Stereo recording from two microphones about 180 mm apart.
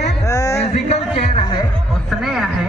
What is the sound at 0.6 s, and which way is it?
Speech, 35° left (ahead or behind).